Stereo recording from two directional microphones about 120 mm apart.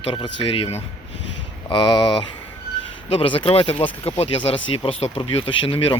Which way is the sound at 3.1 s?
50° left (ahead or behind).